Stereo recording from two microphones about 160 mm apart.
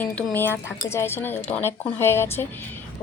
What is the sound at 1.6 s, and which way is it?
Speech, 15° left (ahead or behind).